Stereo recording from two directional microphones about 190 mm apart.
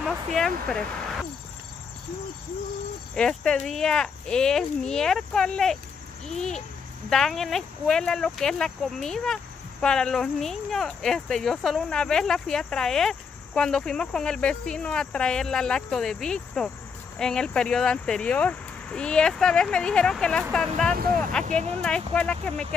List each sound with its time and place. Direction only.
0.0 s speech: centre (ahead or behind)
3.2 s speech: 5° left (ahead or behind)
20.9 s speech: 50° right (ahead or behind)
21.5 s speech: 35° right (ahead or behind)
21.8 s speech: 5° left (ahead or behind)